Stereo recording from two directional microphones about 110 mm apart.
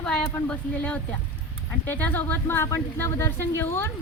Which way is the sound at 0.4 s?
10° left (ahead or behind).